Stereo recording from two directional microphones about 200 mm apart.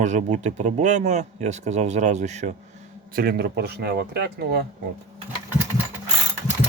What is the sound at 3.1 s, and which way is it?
Speech, 50° right (ahead or behind).